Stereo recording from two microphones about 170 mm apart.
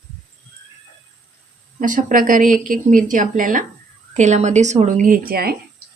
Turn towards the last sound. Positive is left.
turn(degrees=-60)  # may be behind; listen again after turning